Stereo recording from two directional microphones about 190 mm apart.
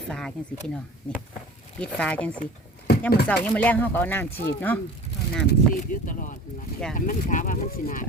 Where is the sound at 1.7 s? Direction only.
5° left (ahead or behind).